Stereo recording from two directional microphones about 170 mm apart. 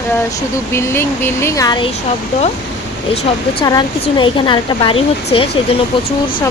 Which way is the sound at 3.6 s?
25° left (ahead or behind).